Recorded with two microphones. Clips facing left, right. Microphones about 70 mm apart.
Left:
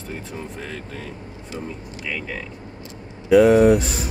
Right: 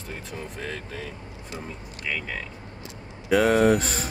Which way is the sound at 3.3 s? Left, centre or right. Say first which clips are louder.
Left 6 dB; right.